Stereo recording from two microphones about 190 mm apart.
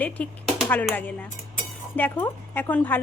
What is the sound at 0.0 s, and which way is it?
A woman's voice, 10° left (ahead or behind).